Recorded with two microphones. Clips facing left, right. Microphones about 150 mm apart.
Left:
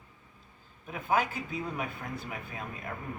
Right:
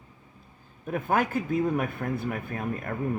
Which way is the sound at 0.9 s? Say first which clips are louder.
Right 4 dB; 50° right (ahead or behind).